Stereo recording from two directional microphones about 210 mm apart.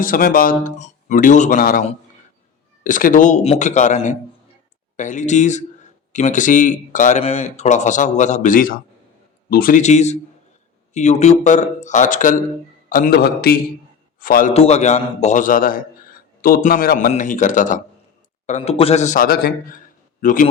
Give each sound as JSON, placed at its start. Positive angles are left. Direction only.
{"t": 0.0, "sound": "a man's voice", "side_deg": 40}
{"t": 14.5, "sound": "speech", "side_deg": 30}